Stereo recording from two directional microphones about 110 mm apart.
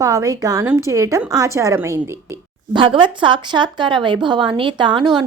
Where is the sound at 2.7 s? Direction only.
45° right (ahead or behind).